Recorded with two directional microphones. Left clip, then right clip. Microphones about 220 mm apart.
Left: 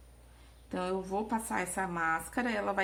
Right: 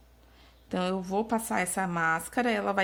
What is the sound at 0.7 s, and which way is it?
A woman's voice, 40° right (ahead or behind).